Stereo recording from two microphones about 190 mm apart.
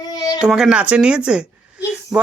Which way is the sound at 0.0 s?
20° left (ahead or behind).